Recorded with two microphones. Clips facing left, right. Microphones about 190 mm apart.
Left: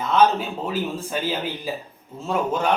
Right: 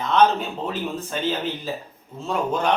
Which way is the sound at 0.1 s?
5° left (ahead or behind).